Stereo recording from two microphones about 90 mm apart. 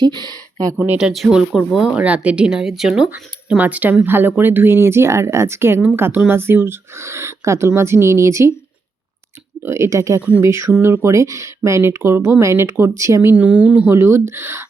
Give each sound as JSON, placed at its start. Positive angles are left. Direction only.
{"t": 0.0, "sound": "speech", "side_deg": -55}
{"t": 0.9, "sound": "speech", "side_deg": -5}
{"t": 9.6, "sound": "speech", "side_deg": -30}
{"t": 13.4, "sound": "speech", "side_deg": -15}
{"t": 13.9, "sound": "speech", "side_deg": -25}